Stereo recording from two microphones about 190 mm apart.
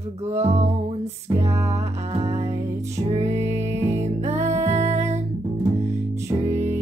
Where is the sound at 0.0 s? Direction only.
35° right (ahead or behind).